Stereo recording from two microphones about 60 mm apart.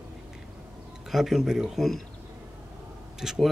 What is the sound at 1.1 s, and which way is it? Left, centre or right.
Speech, centre.